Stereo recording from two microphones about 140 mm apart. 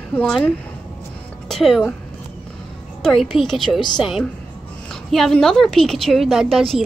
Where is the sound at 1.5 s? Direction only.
Centre (ahead or behind).